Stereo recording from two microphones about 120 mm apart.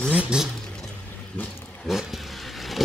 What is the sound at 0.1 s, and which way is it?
Speech, 10° right (ahead or behind).